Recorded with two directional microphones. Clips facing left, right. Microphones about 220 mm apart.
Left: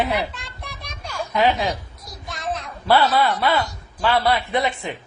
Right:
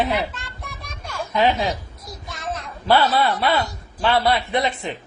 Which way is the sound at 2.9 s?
20° right (ahead or behind).